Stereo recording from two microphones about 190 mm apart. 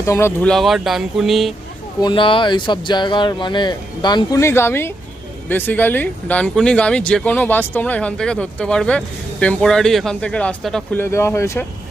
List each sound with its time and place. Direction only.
0.0 s speech: 15° left (ahead or behind)
2.0 s speech: 25° left (ahead or behind); by 11.0 s centre (ahead or behind)
11.0 s speech: 15° left (ahead or behind)